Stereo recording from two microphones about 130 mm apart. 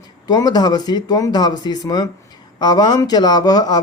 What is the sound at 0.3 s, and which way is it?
A man's voice, 30° left (ahead or behind).